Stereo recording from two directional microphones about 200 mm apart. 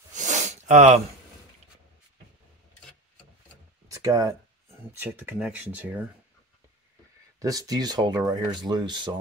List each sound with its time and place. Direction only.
0.1 s sniff: 35° right (ahead or behind)
3.9 s speech: 15° right (ahead or behind)
7.3 s speech: 15° right (ahead or behind)